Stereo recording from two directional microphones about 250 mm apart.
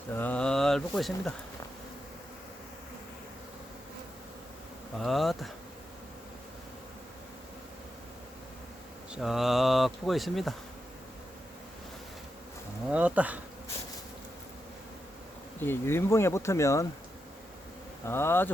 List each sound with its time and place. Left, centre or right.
0.1 s speech: centre
4.9 s speech: centre
9.1 s speech: centre
12.9 s bee: centre
15.6 s speech: centre
18.0 s speech: centre